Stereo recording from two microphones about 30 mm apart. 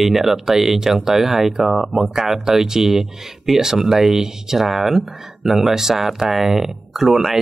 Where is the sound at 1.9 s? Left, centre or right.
Centre.